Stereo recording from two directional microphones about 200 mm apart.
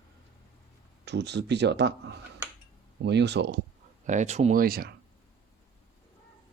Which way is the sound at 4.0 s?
40° right (ahead or behind).